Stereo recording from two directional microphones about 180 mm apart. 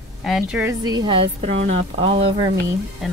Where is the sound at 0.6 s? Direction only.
20° right (ahead or behind).